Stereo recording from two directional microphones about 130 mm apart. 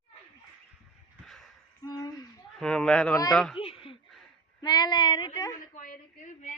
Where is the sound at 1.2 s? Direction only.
Centre (ahead or behind).